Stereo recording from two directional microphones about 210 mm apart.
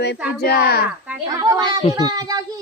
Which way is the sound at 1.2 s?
15° right (ahead or behind).